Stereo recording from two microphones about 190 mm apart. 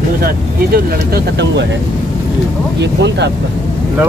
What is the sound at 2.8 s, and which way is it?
Speech, 65° right (ahead or behind).